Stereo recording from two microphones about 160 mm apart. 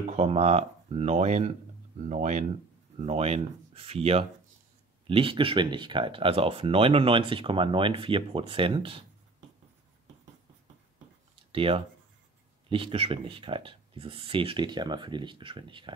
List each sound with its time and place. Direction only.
0.1 s speech: 40° right (ahead or behind)
11.5 s speech: 35° right (ahead or behind)